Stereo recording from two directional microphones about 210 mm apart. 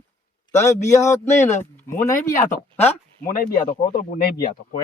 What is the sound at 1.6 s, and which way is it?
Speech, 10° left (ahead or behind).